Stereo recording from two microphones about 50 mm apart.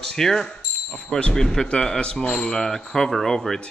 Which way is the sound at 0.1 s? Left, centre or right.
Centre.